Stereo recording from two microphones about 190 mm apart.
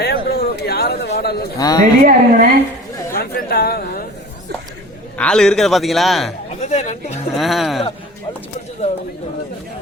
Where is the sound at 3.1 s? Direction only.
55° left (ahead or behind).